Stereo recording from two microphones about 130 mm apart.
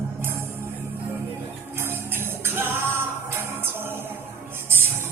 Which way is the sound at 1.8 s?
15° right (ahead or behind).